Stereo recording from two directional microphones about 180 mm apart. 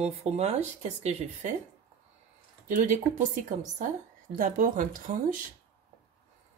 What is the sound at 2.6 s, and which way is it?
A woman's voice, 45° right (ahead or behind).